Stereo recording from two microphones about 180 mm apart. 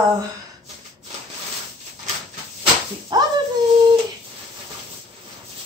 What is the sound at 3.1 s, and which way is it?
Speech, 25° right (ahead or behind).